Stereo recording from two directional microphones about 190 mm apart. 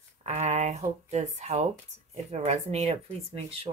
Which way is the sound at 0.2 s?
35° right (ahead or behind).